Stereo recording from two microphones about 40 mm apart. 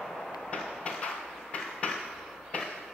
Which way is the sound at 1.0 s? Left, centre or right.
Left.